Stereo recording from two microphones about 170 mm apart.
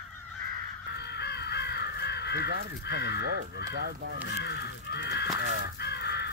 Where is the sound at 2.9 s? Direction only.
85° left.